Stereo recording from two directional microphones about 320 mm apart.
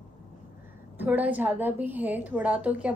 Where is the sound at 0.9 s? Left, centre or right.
Centre.